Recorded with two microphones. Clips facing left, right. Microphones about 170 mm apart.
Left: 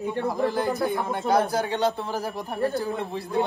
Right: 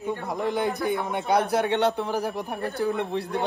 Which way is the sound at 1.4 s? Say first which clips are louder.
Right 1 dB; 70° right (ahead or behind).